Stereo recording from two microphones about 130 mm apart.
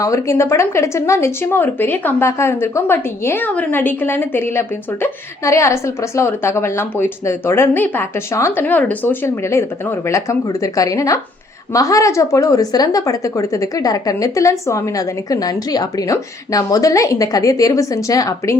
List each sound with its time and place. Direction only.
0.0 s a woman's voice: 25° left (ahead or behind)